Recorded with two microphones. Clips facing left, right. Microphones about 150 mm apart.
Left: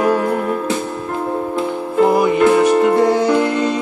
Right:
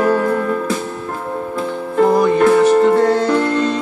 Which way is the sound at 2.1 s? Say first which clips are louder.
Right 1 dB; 10° left (ahead or behind).